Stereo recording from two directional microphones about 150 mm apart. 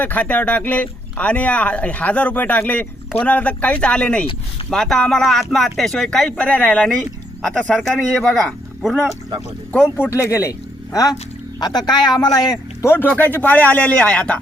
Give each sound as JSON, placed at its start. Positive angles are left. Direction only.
{"t": 0.0, "sound": "speech", "side_deg": 10}
{"t": 10.0, "sound": "speech", "side_deg": 20}
{"t": 11.9, "sound": "speech", "side_deg": 30}